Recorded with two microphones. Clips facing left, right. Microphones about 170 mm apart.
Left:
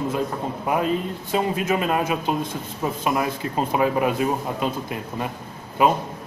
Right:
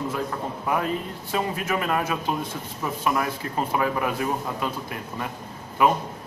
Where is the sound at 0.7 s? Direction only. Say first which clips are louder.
Left 4 dB; 20° left (ahead or behind).